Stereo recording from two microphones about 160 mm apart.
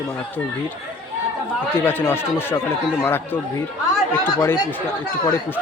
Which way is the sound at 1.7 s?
15° left (ahead or behind).